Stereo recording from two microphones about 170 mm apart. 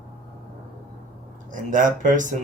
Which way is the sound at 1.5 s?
50° right (ahead or behind).